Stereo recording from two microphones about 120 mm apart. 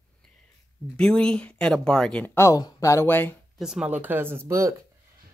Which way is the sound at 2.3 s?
25° left (ahead or behind).